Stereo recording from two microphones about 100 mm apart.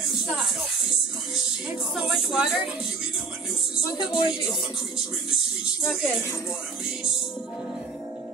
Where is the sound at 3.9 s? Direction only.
45° left (ahead or behind).